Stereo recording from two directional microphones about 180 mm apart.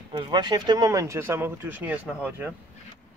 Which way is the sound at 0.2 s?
25° right (ahead or behind).